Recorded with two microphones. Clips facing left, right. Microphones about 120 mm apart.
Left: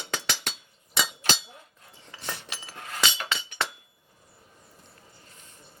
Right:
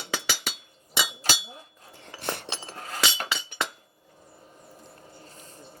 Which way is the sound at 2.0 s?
55° right (ahead or behind).